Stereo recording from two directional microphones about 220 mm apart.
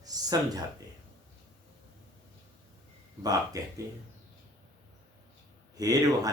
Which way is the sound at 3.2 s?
15° right (ahead or behind).